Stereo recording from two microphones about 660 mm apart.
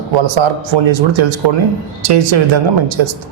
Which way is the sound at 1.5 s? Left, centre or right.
Right.